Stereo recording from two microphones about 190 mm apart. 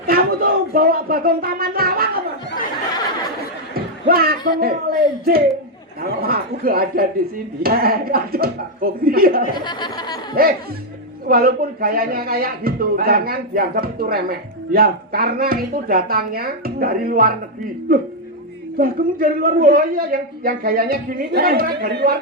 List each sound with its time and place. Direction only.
0.1 s a man's voice: 50° right (ahead or behind)
3.8 s a sound: 50° right (ahead or behind)
4.6 s a man's voice: 50° right (ahead or behind)
9.6 s speech: 25° left (ahead or behind)
10.4 s a man's voice: 50° right (ahead or behind)
18.8 s a man's voice: 50° right (ahead or behind)